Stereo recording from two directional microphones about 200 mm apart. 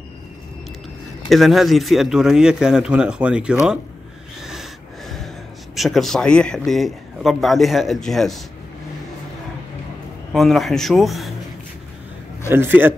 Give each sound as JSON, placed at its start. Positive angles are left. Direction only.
{"t": 1.3, "sound": "a man's voice", "side_deg": 0}
{"t": 4.4, "sound": "snort", "side_deg": 0}
{"t": 5.8, "sound": "a man's voice", "side_deg": 0}
{"t": 10.3, "sound": "a man's voice", "side_deg": 0}
{"t": 12.4, "sound": "a man's voice", "side_deg": -10}